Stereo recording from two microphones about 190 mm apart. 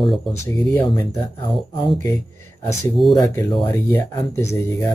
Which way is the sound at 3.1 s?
20° left (ahead or behind).